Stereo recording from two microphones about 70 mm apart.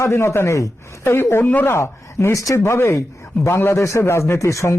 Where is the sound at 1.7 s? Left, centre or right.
Left.